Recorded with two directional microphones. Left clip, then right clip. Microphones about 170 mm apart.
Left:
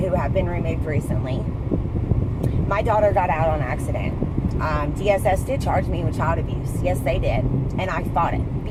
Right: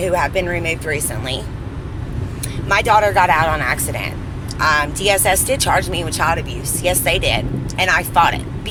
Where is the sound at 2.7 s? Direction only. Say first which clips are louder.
Right 6 dB; 15° right (ahead or behind).